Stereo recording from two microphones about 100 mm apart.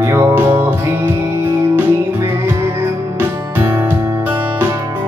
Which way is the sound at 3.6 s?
20° right (ahead or behind).